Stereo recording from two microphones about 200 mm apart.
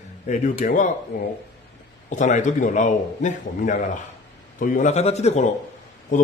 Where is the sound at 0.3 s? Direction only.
40° left (ahead or behind).